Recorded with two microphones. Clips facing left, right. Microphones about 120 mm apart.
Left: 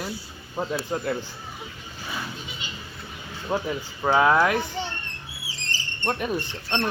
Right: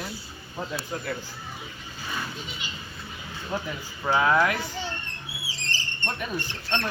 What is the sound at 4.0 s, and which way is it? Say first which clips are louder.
Speech: left 3 dB; 35° left (ahead or behind).